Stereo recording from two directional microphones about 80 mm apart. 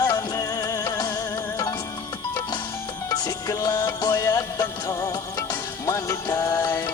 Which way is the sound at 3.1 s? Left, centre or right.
Left.